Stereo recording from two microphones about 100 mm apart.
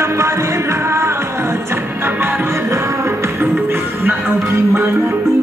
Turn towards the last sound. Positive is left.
turn(degrees=-25)  # may be behind; listen again after turning